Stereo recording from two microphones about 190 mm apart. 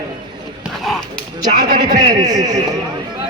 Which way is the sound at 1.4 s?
40° right (ahead or behind).